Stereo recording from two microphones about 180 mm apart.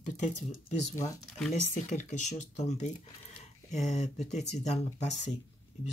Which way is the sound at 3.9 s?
40° left (ahead or behind).